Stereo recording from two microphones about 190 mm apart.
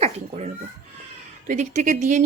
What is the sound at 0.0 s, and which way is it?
Babbling, 35° right (ahead or behind).